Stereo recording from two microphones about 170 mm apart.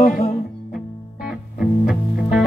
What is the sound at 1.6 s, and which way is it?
Music, centre (ahead or behind).